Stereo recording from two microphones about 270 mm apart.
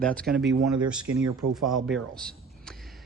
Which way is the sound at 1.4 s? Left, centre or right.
Right.